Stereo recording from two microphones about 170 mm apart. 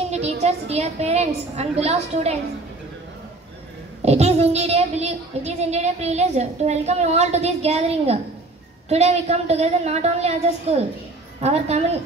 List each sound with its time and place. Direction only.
0.1 s a child's voice: 40° right (ahead or behind)
4.0 s a child's voice: 40° right (ahead or behind)